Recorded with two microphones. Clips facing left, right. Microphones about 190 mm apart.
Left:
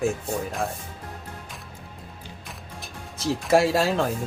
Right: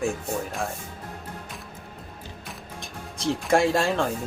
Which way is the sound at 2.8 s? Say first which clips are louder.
Right 1 dB; 5° left (ahead or behind).